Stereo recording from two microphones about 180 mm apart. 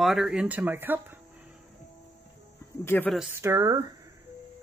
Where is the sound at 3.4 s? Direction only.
15° right (ahead or behind).